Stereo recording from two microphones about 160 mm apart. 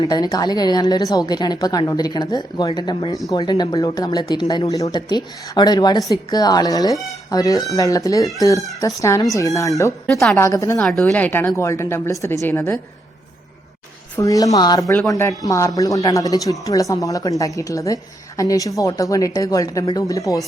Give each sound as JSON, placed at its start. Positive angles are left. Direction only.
{"t": 0.0, "sound": "speech", "side_deg": 25}
{"t": 10.8, "sound": "a woman's voice", "side_deg": 5}
{"t": 14.2, "sound": "speech", "side_deg": 20}